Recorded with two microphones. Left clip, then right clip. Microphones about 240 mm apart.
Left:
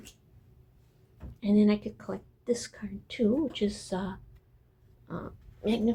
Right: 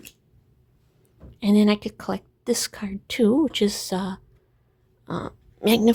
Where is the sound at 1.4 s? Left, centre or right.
Right.